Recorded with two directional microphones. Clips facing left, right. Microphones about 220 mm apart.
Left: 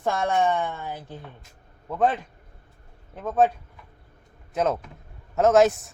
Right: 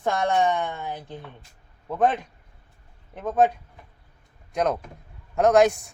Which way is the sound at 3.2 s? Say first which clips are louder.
Even; 15° right (ahead or behind).